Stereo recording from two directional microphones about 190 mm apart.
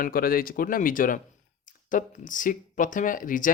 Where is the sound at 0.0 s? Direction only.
50° left (ahead or behind).